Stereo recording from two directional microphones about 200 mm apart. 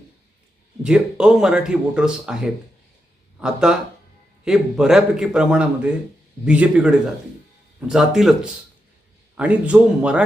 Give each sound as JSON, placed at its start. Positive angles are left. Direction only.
{"t": 0.8, "sound": "speech", "side_deg": -5}
{"t": 9.4, "sound": "speech", "side_deg": -5}